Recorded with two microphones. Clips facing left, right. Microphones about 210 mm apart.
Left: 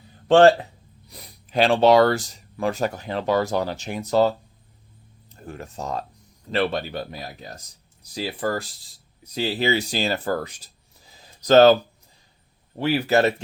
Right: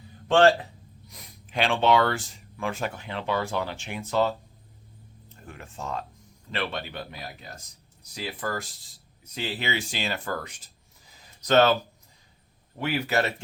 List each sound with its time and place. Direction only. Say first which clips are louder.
0.3 s speech: left 5 dB; 35° left (ahead or behind)
5.5 s speech: left 5 dB; 40° left (ahead or behind)